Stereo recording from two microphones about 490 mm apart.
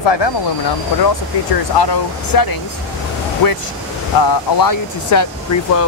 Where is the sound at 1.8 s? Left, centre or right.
Left.